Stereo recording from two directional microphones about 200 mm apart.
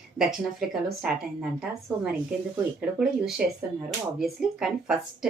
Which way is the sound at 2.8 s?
5° right (ahead or behind).